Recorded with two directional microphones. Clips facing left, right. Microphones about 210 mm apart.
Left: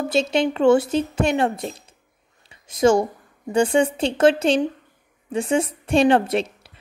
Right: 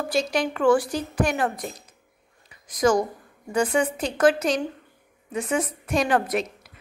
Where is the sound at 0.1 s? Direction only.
25° left (ahead or behind).